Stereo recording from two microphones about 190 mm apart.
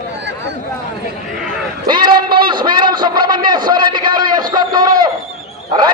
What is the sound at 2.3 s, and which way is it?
A man's voice, 25° right (ahead or behind).